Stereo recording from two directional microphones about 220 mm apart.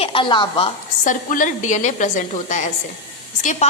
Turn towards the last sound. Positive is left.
turn(degrees=30)  # may be behind; listen again after turning